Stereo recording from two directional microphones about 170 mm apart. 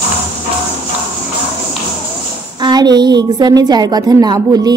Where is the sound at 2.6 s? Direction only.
25° right (ahead or behind).